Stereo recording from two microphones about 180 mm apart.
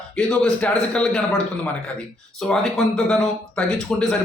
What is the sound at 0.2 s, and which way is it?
A man's voice, 5° left (ahead or behind).